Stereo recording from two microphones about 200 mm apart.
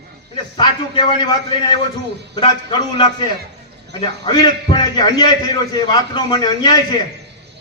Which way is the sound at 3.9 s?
20° left (ahead or behind).